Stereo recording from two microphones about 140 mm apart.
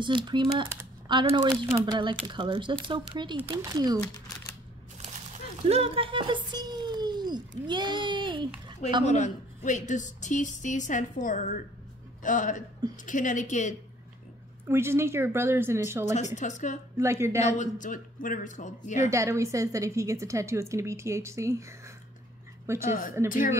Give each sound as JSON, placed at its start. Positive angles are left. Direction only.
{"t": 0.0, "sound": "a woman's voice", "side_deg": -35}
{"t": 5.7, "sound": "a sound", "side_deg": -45}
{"t": 9.0, "sound": "a woman's voice", "side_deg": 55}
{"t": 14.7, "sound": "speech", "side_deg": -20}
{"t": 16.3, "sound": "a woman's voice", "side_deg": 60}
{"t": 16.9, "sound": "a woman's voice", "side_deg": -20}
{"t": 17.4, "sound": "a woman's voice", "side_deg": 65}
{"t": 19.0, "sound": "a woman's voice", "side_deg": -20}
{"t": 22.8, "sound": "a man's voice", "side_deg": 70}